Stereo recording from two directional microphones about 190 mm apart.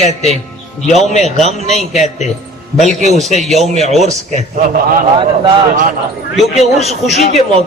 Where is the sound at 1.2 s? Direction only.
35° right (ahead or behind).